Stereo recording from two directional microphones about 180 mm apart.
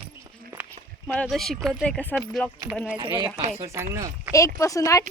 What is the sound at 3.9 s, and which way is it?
Speech, 15° right (ahead or behind).